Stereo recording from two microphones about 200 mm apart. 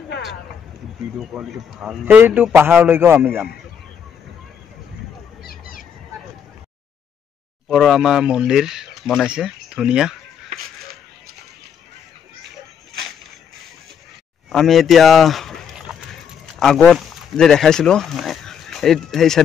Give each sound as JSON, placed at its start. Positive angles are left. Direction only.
{"t": 1.3, "sound": "a man's voice", "side_deg": -5}
{"t": 5.4, "sound": "a sound", "side_deg": 45}
{"t": 7.6, "sound": "speech", "side_deg": 0}
{"t": 14.5, "sound": "speech", "side_deg": 0}